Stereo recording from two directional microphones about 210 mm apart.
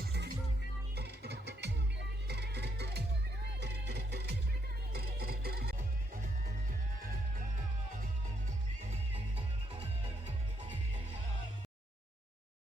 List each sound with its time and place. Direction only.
0.0 s music: 50° right (ahead or behind)
8.8 s music: 30° right (ahead or behind)
10.2 s music: 25° right (ahead or behind)